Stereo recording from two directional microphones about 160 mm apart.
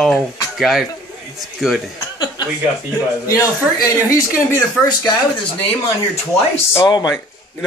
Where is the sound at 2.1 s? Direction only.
25° left (ahead or behind).